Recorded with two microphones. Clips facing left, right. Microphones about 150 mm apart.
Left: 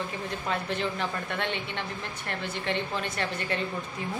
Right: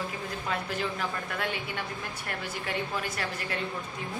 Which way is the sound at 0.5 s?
Centre (ahead or behind).